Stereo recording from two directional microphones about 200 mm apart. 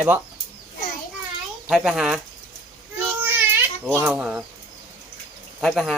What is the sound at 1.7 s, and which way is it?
Speech, centre (ahead or behind).